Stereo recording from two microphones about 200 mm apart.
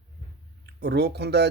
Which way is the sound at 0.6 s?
55° right (ahead or behind).